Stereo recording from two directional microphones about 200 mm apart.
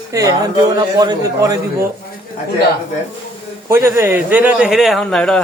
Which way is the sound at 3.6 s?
15° right (ahead or behind).